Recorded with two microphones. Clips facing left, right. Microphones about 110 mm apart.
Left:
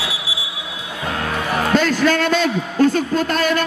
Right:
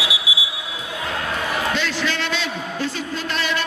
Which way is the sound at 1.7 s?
45° left (ahead or behind).